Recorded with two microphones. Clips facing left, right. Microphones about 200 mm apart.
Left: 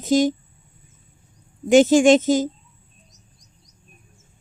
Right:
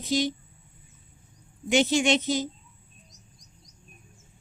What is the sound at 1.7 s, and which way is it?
Speech, 45° left (ahead or behind).